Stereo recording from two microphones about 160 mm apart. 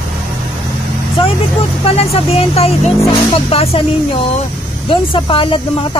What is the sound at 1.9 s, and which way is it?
Speech, 40° left (ahead or behind).